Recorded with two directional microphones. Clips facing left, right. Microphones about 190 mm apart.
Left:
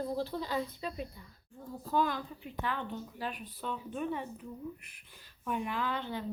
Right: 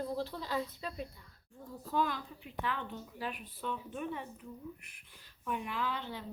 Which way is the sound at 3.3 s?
35° left (ahead or behind).